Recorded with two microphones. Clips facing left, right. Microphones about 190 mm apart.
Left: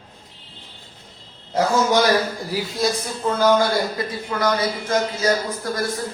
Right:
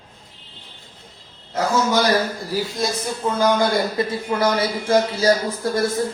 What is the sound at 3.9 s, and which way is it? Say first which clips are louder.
Speech: right 4 dB; 25° right (ahead or behind).